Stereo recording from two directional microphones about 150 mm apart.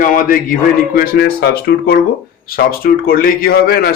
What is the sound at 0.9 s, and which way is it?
Speech, 80° left.